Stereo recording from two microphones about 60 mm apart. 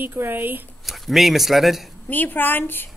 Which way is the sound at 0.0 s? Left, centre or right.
Right.